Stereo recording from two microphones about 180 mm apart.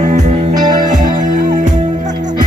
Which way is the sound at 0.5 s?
20° right (ahead or behind).